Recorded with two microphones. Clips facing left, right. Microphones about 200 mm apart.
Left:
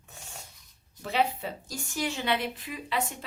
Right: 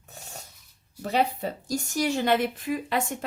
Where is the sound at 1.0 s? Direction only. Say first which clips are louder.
Right 3 dB; 40° right (ahead or behind).